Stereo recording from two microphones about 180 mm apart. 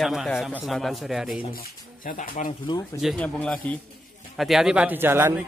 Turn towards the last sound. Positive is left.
turn(degrees=-15)  # may be behind; listen again after turning